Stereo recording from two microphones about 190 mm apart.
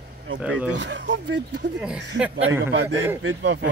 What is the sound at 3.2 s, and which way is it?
Speech, 75° right (ahead or behind).